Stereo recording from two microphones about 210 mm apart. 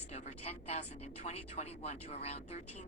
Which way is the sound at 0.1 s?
30° left (ahead or behind).